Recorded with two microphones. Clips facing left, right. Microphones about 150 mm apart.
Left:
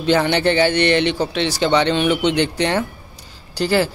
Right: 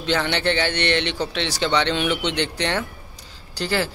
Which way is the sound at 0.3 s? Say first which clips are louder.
Left 6 dB; 10° left (ahead or behind).